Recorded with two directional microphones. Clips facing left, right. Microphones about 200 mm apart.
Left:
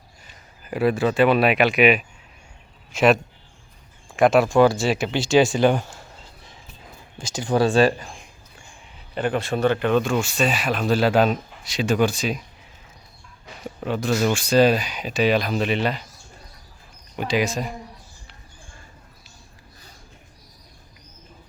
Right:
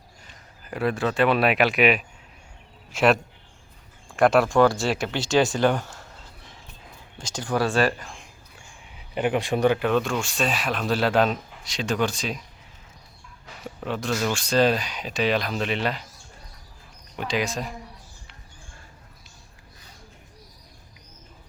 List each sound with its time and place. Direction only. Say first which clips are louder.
0.3 s speech: left 4 dB; 5° left (ahead or behind)
4.2 s speech: left 2 dB; 20° left (ahead or behind)
4.4 s speech: left 2 dB; 10° left (ahead or behind)
4.8 s speech: left 3 dB; 20° left (ahead or behind)
7.2 s speech: left 3 dB; 10° left (ahead or behind)
7.4 s speech: left 5 dB; 25° left (ahead or behind)
9.0 s speech: even; 15° right (ahead or behind); by 12.4 s 5° left (ahead or behind)
13.7 s speech: left 4 dB; centre (ahead or behind)
17.2 s speech: left 4 dB; 5° left (ahead or behind)